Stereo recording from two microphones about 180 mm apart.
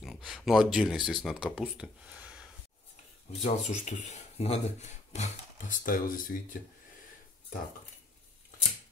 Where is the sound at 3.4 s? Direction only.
40° left (ahead or behind).